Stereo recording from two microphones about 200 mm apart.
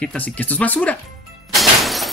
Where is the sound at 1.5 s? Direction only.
Centre (ahead or behind).